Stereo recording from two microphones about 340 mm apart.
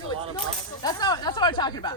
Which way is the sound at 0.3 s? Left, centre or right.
Centre.